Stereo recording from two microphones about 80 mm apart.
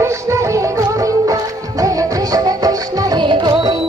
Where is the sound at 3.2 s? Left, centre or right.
Right.